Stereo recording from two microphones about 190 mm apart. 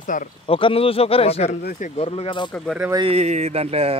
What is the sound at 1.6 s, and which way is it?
Speech, 45° left (ahead or behind).